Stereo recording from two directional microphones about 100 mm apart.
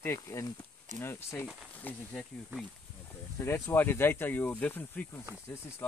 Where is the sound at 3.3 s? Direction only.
25° left (ahead or behind).